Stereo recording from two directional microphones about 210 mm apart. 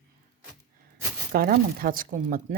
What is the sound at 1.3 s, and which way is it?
Speech, 45° right (ahead or behind).